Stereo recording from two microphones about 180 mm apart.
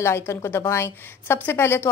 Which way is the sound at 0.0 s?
15° left (ahead or behind).